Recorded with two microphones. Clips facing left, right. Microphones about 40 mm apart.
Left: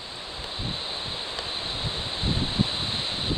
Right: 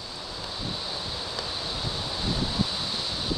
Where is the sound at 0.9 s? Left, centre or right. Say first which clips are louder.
Left 1 dB; left.